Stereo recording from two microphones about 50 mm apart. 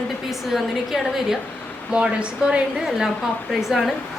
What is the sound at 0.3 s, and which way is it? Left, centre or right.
A woman's voice, centre.